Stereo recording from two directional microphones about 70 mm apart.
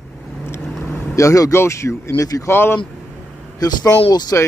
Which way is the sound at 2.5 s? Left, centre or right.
Left.